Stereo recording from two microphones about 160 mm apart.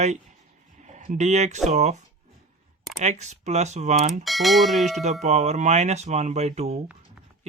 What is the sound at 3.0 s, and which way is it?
Speech, 45° right (ahead or behind).